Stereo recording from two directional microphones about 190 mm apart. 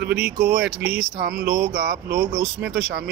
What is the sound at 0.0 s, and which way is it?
Speech, 55° right (ahead or behind).